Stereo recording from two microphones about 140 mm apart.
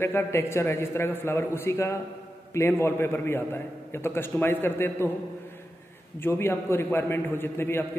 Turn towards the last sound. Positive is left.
turn(degrees=15)  # may be behind; listen again after turning